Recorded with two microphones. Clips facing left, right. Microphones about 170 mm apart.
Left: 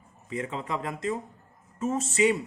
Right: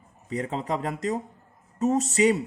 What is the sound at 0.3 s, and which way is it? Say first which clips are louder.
Speech: right 4 dB; 40° right (ahead or behind).